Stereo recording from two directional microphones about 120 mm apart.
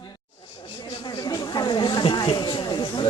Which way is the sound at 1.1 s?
35° left (ahead or behind).